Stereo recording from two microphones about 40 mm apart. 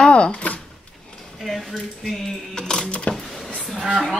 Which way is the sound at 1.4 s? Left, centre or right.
Centre.